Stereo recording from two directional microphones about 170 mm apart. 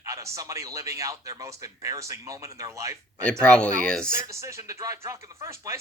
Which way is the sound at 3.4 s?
5° left (ahead or behind).